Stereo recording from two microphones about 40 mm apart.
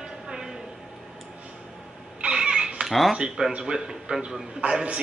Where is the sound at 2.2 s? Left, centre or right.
Right.